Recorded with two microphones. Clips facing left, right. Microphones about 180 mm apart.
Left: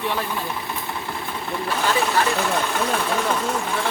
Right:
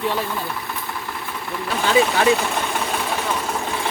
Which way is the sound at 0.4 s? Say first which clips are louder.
Even; 25° left (ahead or behind).